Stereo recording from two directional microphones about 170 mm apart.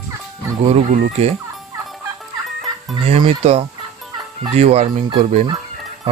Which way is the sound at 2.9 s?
30° right (ahead or behind).